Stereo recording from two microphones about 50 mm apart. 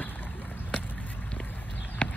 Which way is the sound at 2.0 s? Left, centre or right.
Centre.